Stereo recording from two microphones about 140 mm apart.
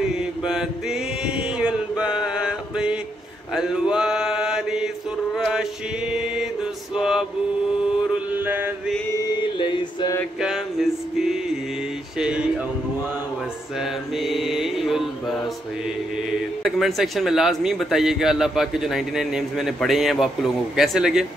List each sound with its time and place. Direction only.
0.2 s chant: 5° right (ahead or behind)
3.5 s mantra: 5° right (ahead or behind)
7.0 s male singing: 5° right (ahead or behind)
8.1 s mantra: 15° right (ahead or behind)
9.1 s mantra: 30° left (ahead or behind)
10.4 s music: 5° right (ahead or behind)
12.2 s a sound: 5° right (ahead or behind)
13.7 s mantra: centre (ahead or behind)
16.6 s a man's voice: centre (ahead or behind)